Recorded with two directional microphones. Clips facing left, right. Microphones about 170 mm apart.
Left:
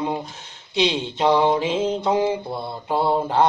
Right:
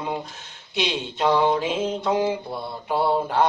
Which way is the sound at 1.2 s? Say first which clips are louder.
Left 2 dB; 15° left (ahead or behind).